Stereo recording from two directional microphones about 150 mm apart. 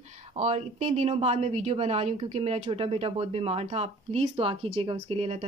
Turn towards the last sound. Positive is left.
turn(degrees=-45)  # may be behind; listen again after turning